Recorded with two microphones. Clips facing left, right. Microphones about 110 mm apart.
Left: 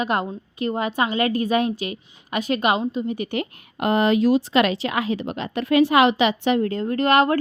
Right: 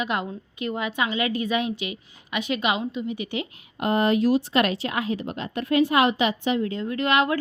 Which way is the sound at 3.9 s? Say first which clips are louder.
Left 3 dB; 90° left.